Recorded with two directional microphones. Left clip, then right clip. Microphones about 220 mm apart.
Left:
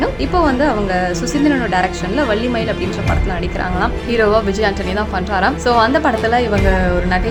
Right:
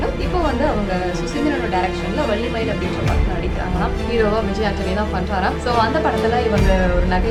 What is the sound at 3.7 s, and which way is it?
A woman's voice, 35° left (ahead or behind).